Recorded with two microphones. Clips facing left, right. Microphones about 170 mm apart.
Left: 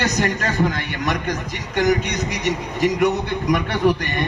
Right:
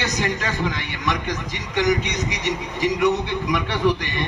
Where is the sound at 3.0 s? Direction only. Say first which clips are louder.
Left 1 dB; 40° left (ahead or behind).